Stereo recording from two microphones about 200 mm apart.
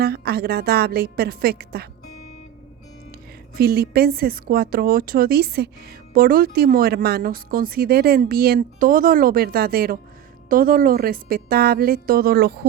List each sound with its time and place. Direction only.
0.0 s speech: 50° right (ahead or behind)
3.6 s speech: 50° right (ahead or behind)